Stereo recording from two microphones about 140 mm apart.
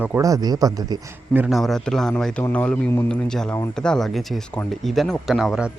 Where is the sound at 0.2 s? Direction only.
25° right (ahead or behind).